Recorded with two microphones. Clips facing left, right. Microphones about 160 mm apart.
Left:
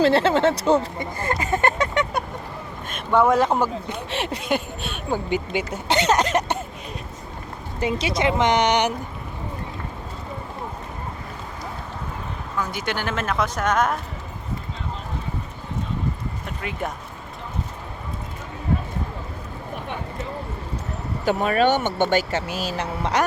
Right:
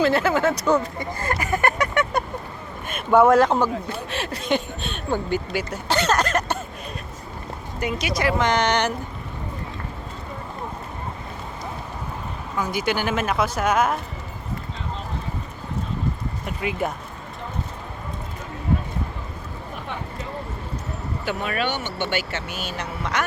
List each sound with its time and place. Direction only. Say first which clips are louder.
0.0 s speech: left 2 dB; 30° left (ahead or behind)
2.8 s speech: right 3 dB; 5° right (ahead or behind)
4.1 s speech: left 5 dB; 20° left (ahead or behind)
4.4 s a sound: right 1 dB; 5° left (ahead or behind)
5.5 s speech: left 2 dB; 20° left (ahead or behind)
7.8 s speech: left 2 dB; 25° left (ahead or behind)
12.5 s speech: right 3 dB; 10° right (ahead or behind)
16.5 s speech: right 4 dB; 10° right (ahead or behind)
21.2 s speech: left 7 dB; 40° left (ahead or behind)